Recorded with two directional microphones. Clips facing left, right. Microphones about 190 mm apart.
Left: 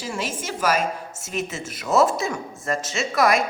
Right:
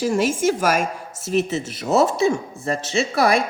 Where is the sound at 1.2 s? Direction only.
35° right (ahead or behind).